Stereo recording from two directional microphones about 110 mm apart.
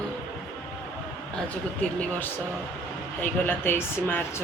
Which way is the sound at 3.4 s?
20° left (ahead or behind).